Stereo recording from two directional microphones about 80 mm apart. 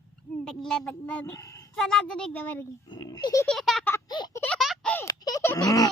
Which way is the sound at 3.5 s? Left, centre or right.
Centre.